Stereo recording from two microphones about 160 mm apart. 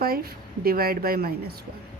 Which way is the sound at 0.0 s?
70° right (ahead or behind).